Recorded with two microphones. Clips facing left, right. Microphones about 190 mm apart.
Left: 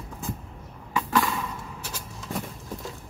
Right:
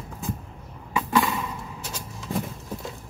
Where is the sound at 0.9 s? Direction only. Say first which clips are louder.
Right 2 dB; 10° right (ahead or behind).